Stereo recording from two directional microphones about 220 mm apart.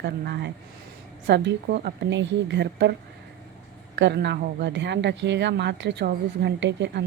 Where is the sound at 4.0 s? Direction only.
50° right (ahead or behind).